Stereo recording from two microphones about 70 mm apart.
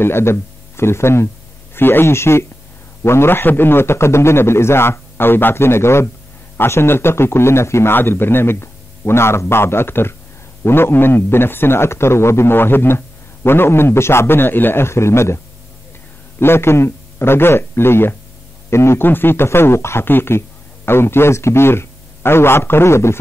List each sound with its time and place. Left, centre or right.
0.0 s a man's voice: left